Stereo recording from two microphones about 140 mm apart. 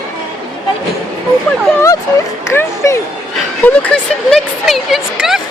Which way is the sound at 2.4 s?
20° left (ahead or behind).